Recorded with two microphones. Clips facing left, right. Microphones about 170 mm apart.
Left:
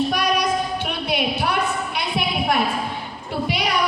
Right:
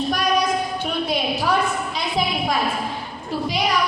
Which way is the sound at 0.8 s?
65° left (ahead or behind).